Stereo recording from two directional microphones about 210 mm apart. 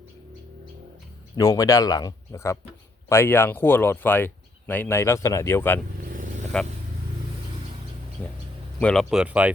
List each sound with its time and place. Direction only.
1.4 s speech: 15° left (ahead or behind)
8.2 s speech: 5° left (ahead or behind)